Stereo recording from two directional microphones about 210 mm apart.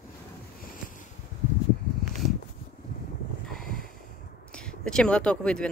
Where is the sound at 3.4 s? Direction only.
Centre (ahead or behind).